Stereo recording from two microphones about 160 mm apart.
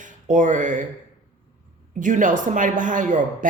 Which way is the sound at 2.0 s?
55° right (ahead or behind).